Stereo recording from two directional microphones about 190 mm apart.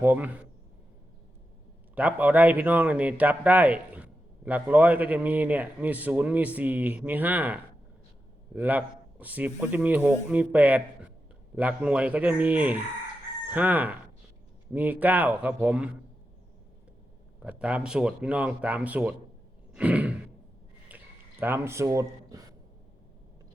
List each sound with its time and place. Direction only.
0.0 s speech: 10° right (ahead or behind)
2.0 s speech: 10° right (ahead or behind)
17.4 s speech: 5° right (ahead or behind)
19.7 s sigh: 5° right (ahead or behind)
20.8 s a sound: 10° right (ahead or behind)